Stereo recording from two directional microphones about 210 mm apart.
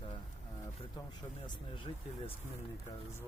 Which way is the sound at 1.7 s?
25° left (ahead or behind).